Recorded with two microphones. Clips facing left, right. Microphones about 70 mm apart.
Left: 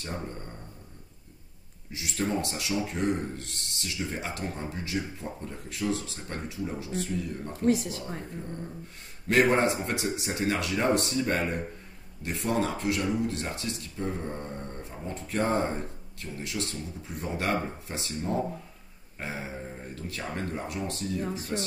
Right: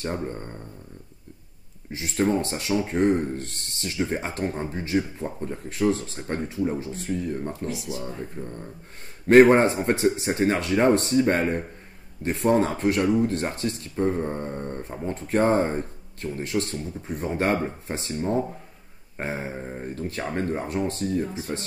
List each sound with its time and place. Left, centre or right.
0.0 s speech: right
1.9 s speech: right
7.6 s speech: left
9.3 s speech: right